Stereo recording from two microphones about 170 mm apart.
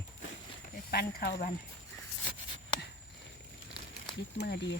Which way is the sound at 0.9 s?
70° left (ahead or behind).